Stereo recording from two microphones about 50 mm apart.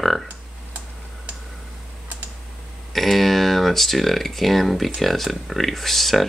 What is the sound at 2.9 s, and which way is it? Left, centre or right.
Speech, centre.